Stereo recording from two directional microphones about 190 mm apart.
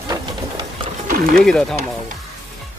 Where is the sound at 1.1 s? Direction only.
50° right (ahead or behind).